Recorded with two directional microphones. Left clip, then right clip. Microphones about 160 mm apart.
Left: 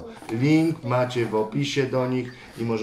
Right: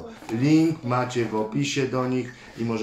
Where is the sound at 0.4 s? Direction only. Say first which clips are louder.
Right 1 dB; 5° right (ahead or behind).